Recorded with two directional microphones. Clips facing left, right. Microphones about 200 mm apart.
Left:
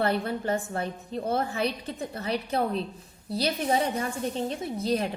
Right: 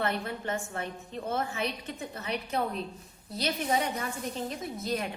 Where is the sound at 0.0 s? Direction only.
35° left (ahead or behind).